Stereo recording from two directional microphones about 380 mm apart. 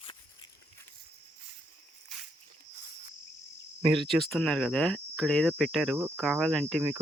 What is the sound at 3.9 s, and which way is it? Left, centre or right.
Speech, centre.